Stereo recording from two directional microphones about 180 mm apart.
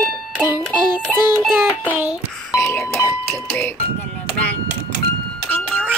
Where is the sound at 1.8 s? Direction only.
10° right (ahead or behind).